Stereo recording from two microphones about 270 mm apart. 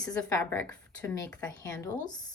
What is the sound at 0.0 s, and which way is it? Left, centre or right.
A woman's voice, centre.